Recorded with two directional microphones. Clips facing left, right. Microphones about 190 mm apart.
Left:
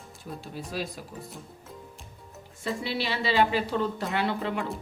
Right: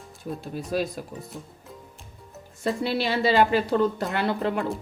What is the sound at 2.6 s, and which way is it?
Speech, 45° right (ahead or behind).